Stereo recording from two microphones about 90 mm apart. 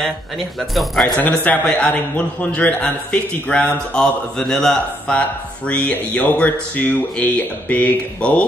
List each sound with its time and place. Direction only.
0.0 s speech: centre (ahead or behind)
1.1 s a man's voice: 15° left (ahead or behind)